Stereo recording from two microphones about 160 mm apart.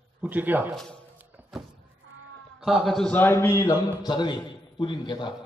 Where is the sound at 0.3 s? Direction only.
10° right (ahead or behind).